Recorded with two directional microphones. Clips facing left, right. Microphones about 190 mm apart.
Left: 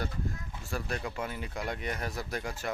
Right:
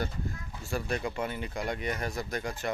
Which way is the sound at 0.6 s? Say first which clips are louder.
Right 4 dB; centre (ahead or behind).